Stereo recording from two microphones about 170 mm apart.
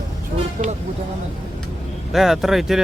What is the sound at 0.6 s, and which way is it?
Speech, 45° right (ahead or behind).